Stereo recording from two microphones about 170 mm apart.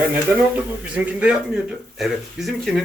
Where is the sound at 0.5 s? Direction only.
5° right (ahead or behind).